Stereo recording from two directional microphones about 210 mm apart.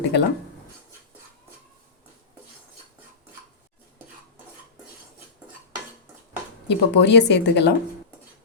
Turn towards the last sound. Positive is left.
turn(degrees=55)  # may be behind; listen again after turning